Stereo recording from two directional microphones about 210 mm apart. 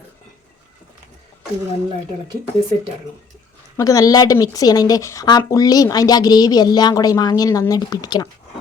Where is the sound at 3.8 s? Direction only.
15° left (ahead or behind).